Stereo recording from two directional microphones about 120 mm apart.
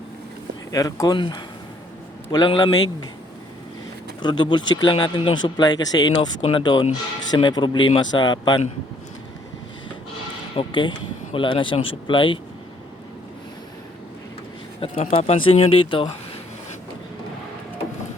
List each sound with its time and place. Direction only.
0.7 s speech: 30° left (ahead or behind)
4.2 s speech: 40° left (ahead or behind)
10.5 s speech: 45° left (ahead or behind)
14.9 s speech: 60° left (ahead or behind); by 16.0 s 45° left (ahead or behind)